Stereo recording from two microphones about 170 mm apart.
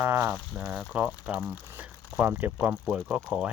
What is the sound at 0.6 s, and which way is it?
Speech, 5° right (ahead or behind).